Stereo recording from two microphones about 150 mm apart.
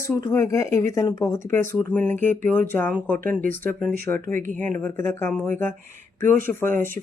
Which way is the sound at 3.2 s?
65° right (ahead or behind).